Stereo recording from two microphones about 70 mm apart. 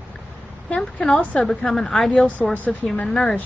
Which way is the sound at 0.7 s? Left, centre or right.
Centre.